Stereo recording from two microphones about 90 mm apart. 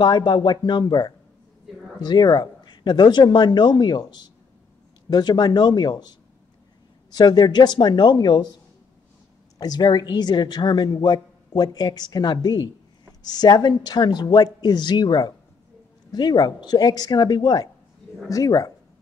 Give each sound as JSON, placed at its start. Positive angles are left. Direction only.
{"t": 0.0, "sound": "a woman's voice", "side_deg": 60}
{"t": 7.2, "sound": "a woman's voice", "side_deg": 55}
{"t": 9.6, "sound": "a woman's voice", "side_deg": 50}
{"t": 18.3, "sound": "speech", "side_deg": 40}